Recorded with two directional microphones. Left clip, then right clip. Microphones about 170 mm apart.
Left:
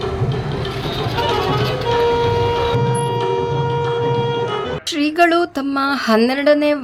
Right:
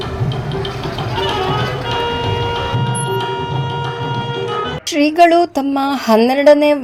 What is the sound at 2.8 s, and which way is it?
Music, 90° right.